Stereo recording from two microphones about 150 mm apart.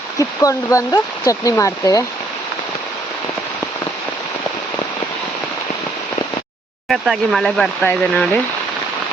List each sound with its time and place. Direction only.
0.2 s speech: 20° left (ahead or behind)
6.8 s speech: centre (ahead or behind)